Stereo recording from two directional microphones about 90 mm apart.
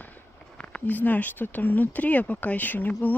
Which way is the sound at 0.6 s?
15° left (ahead or behind).